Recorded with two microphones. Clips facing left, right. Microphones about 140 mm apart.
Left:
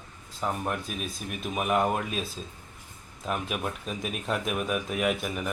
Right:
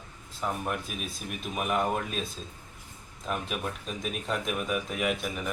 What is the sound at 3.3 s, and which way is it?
Speech, 5° left (ahead or behind).